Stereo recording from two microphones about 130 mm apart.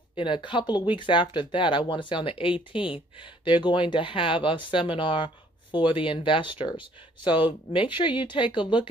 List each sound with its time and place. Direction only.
0.1 s speech: 40° left (ahead or behind)